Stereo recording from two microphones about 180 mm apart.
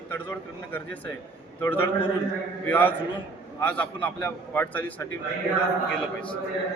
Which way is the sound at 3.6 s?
10° left (ahead or behind).